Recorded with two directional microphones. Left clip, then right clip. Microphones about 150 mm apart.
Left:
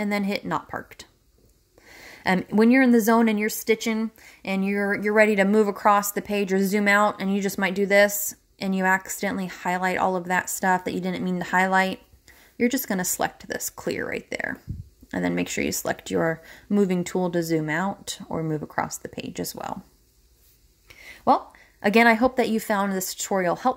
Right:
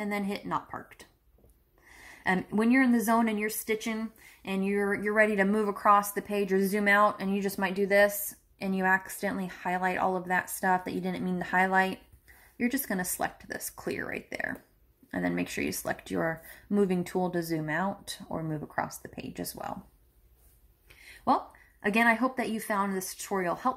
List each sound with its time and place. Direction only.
0.0 s a woman's voice: 45° left (ahead or behind); by 19.8 s 30° left (ahead or behind)
20.9 s a woman's voice: 40° left (ahead or behind)